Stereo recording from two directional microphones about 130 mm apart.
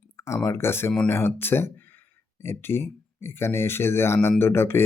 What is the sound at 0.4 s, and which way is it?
Speech, 20° left (ahead or behind).